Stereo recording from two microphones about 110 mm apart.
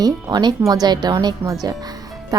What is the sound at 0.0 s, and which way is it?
Speech, 40° right (ahead or behind).